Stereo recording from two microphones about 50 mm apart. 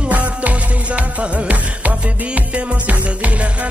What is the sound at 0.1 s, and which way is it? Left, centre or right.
Music, right.